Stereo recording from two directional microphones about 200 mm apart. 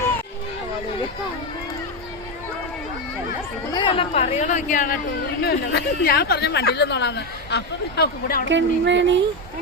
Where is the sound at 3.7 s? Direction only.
25° left (ahead or behind); by 5.0 s 40° left (ahead or behind).